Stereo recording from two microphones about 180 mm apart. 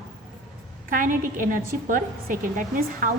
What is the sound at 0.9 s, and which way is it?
A woman's voice, 50° right (ahead or behind).